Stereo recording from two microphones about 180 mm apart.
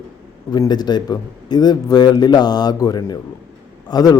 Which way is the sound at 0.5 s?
25° left (ahead or behind).